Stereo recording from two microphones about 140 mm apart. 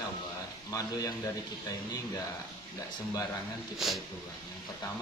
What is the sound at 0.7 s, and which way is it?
Speech, 25° left (ahead or behind).